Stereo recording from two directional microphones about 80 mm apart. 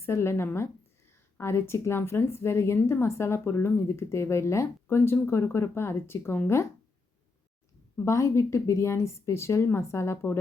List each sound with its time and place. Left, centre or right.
0.0 s speech: left
7.9 s speech: left